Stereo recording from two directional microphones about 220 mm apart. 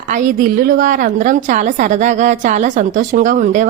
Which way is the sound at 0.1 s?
40° right (ahead or behind).